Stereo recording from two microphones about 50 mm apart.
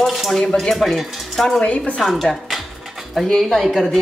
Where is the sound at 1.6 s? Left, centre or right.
Left.